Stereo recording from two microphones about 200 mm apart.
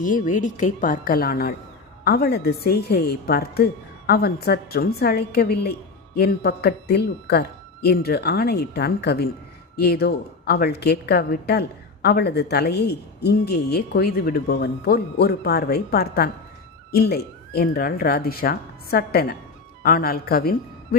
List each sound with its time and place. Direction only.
0.0 s a woman's voice: 40° left (ahead or behind)